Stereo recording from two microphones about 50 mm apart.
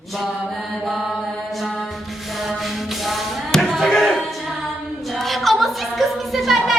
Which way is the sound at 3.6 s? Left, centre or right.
Centre.